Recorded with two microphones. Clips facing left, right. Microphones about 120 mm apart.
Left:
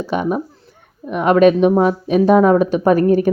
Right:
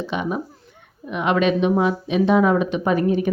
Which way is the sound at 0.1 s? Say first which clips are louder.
Left 6 dB; 45° left (ahead or behind).